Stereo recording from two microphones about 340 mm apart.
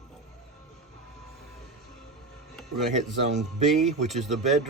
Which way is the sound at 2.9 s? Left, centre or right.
Centre.